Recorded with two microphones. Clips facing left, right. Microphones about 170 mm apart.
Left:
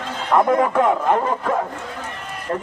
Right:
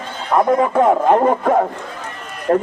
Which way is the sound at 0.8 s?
55° right (ahead or behind).